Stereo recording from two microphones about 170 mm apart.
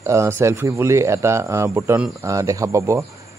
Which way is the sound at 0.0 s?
15° right (ahead or behind).